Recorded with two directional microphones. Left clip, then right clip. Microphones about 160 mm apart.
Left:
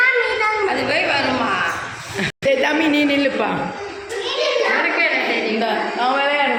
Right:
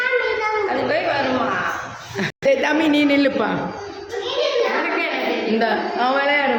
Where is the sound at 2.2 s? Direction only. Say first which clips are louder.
Even; 10° right (ahead or behind).